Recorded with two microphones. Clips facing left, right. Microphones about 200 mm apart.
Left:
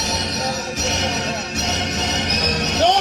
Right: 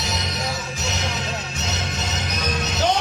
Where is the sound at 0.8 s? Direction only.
70° left (ahead or behind).